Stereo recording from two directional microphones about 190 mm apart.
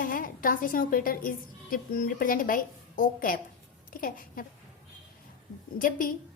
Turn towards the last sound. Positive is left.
turn(degrees=45)  # may be behind; listen again after turning